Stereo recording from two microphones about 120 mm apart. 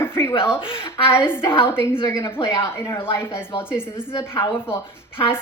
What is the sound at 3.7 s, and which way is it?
Speech, 20° left (ahead or behind).